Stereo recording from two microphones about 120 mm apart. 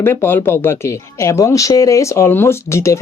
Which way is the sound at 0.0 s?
20° left (ahead or behind).